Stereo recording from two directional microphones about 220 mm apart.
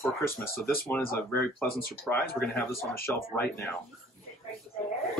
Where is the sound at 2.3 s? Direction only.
10° left (ahead or behind).